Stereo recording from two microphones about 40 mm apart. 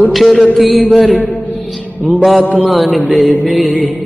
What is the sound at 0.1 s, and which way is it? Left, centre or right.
Speech, centre.